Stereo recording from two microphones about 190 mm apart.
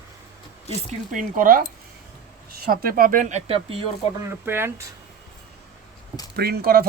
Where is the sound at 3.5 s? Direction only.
30° right (ahead or behind).